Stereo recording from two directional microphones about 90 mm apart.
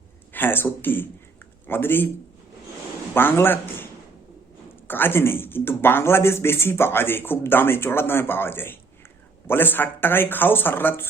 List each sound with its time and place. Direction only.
0.3 s a man's voice: 25° left (ahead or behind)
3.2 s a man's voice: 25° left (ahead or behind)
4.9 s speech: 25° left (ahead or behind)